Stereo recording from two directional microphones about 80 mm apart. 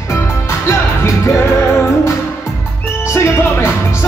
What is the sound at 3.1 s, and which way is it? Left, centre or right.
Music, left.